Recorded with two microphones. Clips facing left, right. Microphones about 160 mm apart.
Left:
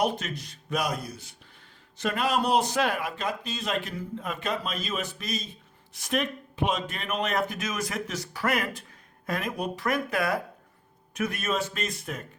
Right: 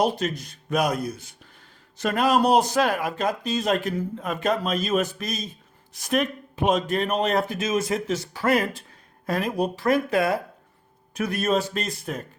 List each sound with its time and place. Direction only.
0.0 s a man's voice: 40° right (ahead or behind)